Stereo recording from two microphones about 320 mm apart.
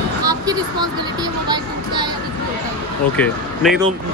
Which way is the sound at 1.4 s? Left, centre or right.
Centre.